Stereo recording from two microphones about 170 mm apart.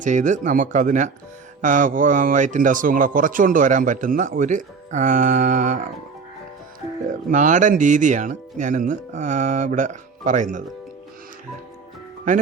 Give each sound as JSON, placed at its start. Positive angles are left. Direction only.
{"t": 0.0, "sound": "speech", "side_deg": -45}
{"t": 7.3, "sound": "speech", "side_deg": -45}